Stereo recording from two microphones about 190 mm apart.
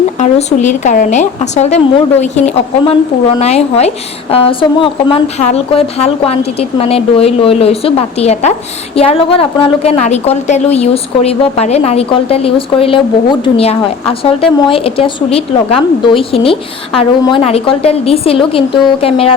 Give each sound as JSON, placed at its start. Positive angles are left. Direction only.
{"t": 0.2, "sound": "a woman's voice", "side_deg": 40}